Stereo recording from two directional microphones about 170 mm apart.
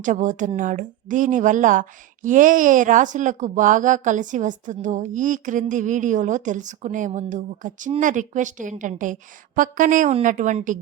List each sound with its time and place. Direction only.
0.0 s speech: 45° right (ahead or behind)